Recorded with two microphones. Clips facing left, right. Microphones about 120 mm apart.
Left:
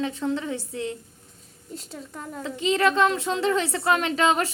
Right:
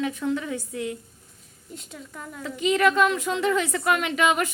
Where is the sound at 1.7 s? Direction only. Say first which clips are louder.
Left 3 dB; 35° left (ahead or behind).